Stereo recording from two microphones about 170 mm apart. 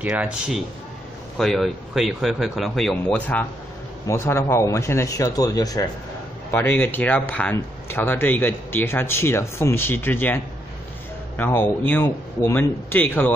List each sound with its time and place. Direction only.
0.0 s speech: 10° right (ahead or behind); by 13.3 s 10° left (ahead or behind)